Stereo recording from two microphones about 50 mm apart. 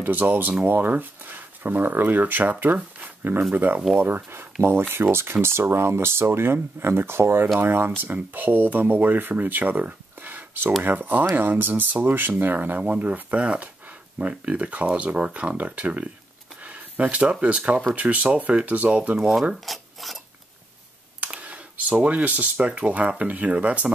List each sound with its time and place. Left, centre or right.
0.0 s speech: right
4.0 s speech: right
19.1 s speech: centre
19.6 s dishes: centre
21.2 s speech: right